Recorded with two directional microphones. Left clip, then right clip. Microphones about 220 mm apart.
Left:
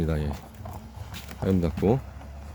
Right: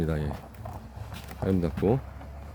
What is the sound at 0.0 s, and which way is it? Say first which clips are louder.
Speech: left 1 dB; 5° left (ahead or behind).